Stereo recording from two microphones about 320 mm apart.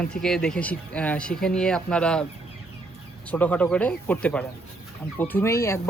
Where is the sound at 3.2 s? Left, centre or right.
Centre.